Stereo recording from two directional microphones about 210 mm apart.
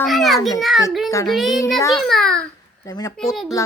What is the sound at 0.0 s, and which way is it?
A child's voice, centre (ahead or behind).